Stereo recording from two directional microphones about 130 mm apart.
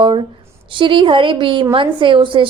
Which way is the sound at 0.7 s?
40° right (ahead or behind).